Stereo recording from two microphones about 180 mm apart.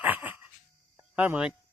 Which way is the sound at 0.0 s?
10° right (ahead or behind).